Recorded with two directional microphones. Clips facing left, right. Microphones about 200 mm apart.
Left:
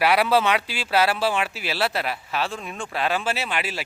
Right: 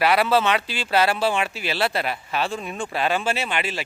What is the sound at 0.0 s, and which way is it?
Speech, 10° left (ahead or behind).